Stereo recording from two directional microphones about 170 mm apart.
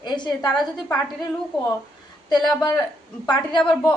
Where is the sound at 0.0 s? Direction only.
25° left (ahead or behind).